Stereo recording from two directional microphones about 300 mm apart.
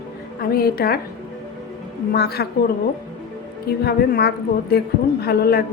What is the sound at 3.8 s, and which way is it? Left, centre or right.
A woman's voice, left.